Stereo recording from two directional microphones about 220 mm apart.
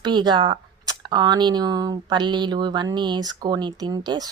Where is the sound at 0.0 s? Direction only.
20° right (ahead or behind).